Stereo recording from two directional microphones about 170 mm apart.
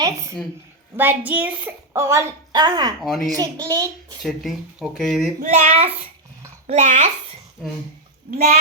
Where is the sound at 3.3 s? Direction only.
20° right (ahead or behind).